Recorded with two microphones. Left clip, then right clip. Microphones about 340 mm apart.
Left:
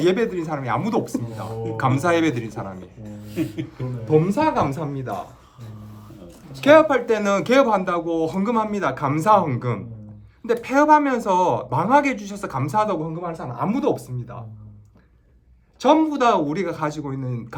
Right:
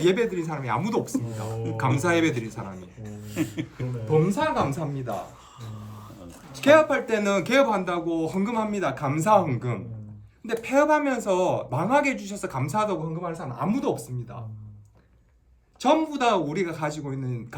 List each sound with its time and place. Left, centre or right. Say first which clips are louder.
0.0 s speech: left 3 dB; centre
3.3 s speech: left 3 dB; right
4.2 s a woman's voice: left 1 dB; centre
6.6 s speech: left 4 dB; centre
15.8 s speech: left 5 dB; centre